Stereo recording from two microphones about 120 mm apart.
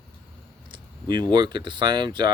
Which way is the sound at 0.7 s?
35° right (ahead or behind).